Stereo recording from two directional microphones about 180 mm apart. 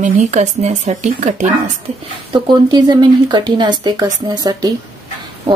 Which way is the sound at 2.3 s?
25° right (ahead or behind).